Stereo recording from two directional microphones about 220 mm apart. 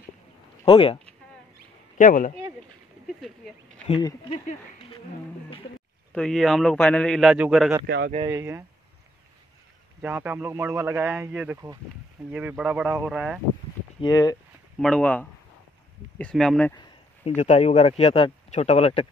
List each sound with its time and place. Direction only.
0.7 s speech: 25° left (ahead or behind)
2.0 s speech: 35° left (ahead or behind)
3.2 s a sound: centre (ahead or behind)
3.8 s speech: 25° left (ahead or behind)
6.1 s a man's voice: centre (ahead or behind)
7.8 s speech: 50° right (ahead or behind)
8.3 s a man's voice: 10° right (ahead or behind)
10.0 s a man's voice: 10° right (ahead or behind)
14.0 s speech: 15° left (ahead or behind)
14.8 s a man's voice: 5° left (ahead or behind)
17.4 s speech: 30° left (ahead or behind)